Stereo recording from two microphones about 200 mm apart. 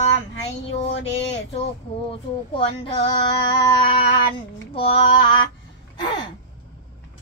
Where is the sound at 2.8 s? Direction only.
25° left (ahead or behind).